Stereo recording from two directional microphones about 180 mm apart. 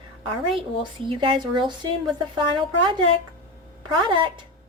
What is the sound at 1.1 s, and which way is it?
A woman's voice, 30° right (ahead or behind).